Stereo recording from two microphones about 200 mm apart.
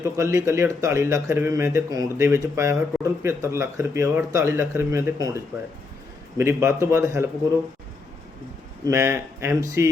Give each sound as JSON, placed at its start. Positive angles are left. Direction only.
{"t": 0.0, "sound": "speech", "side_deg": -15}
{"t": 8.9, "sound": "speech", "side_deg": -15}